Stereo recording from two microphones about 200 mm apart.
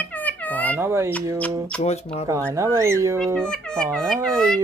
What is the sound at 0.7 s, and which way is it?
Speech, 10° right (ahead or behind).